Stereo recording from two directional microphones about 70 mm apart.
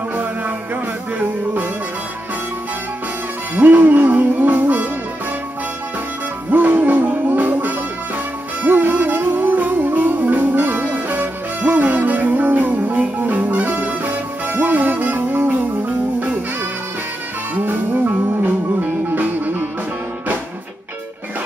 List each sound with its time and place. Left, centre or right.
1.2 s music: right
3.5 s music: right
6.5 s music: right
17.6 s music: right